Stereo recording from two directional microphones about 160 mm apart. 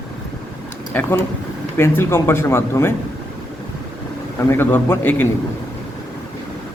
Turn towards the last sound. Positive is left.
turn(degrees=10)  # may be behind; listen again after turning